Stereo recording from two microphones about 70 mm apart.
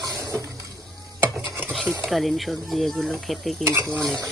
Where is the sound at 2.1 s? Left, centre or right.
Centre.